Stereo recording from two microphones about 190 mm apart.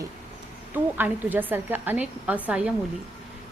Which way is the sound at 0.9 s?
10° right (ahead or behind).